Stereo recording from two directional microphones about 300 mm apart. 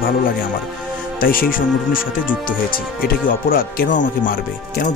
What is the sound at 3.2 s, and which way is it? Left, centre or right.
Speech, left.